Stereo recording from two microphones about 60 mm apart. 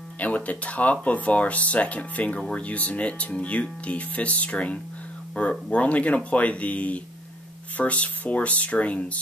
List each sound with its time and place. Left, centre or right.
0.2 s speech: left